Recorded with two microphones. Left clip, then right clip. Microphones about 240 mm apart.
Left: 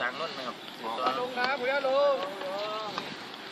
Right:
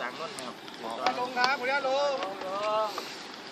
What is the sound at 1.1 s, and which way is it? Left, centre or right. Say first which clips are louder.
Speech: right 3 dB; right.